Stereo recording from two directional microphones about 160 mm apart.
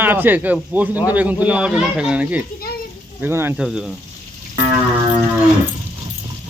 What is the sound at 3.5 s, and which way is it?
Speech, 5° right (ahead or behind).